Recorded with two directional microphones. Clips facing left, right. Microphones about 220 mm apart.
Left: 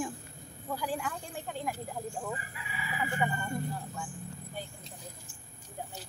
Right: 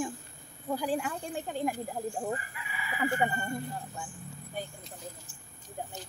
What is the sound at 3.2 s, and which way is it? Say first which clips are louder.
Speech: even; 30° right (ahead or behind).